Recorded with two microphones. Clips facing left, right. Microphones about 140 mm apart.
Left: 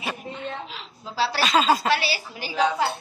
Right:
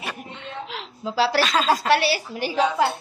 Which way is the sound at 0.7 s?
80° right.